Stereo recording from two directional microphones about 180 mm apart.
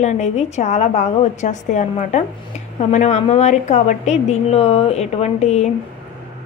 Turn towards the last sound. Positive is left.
turn(degrees=40)  # may be behind; listen again after turning